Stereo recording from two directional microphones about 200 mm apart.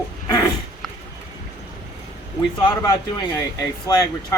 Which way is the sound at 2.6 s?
20° left (ahead or behind).